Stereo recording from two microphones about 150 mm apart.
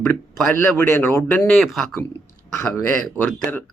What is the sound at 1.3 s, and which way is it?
Speech, 5° left (ahead or behind).